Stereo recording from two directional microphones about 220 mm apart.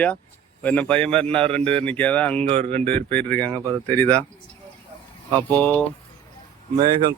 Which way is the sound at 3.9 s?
10° left (ahead or behind).